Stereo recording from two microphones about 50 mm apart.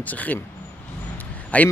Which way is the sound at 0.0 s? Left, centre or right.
Left.